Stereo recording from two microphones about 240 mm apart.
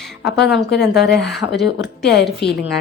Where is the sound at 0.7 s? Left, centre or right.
Left.